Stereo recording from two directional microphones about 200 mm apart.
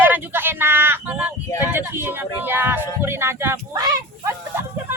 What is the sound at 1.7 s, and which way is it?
Speech, 10° right (ahead or behind).